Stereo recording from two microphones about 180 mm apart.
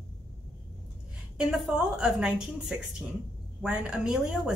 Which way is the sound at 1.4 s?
Centre (ahead or behind).